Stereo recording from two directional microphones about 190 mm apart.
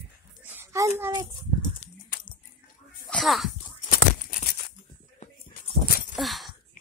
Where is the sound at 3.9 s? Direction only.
50° left (ahead or behind).